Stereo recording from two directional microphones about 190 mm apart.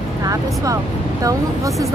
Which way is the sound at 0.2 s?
15° right (ahead or behind).